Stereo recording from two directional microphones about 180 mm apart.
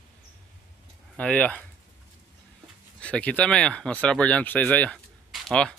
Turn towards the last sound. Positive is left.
turn(degrees=0)  # may be behind; listen again after turning